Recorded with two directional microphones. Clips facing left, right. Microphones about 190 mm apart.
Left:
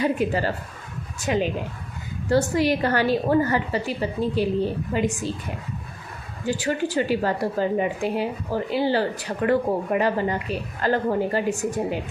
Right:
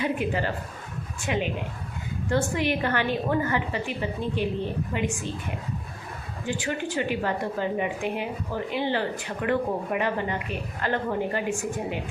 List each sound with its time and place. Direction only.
0.0 s a woman's voice: 35° left (ahead or behind)
6.4 s a woman's voice: 40° left (ahead or behind)